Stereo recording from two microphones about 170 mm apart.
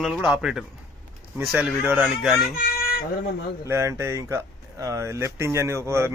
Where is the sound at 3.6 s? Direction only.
15° right (ahead or behind).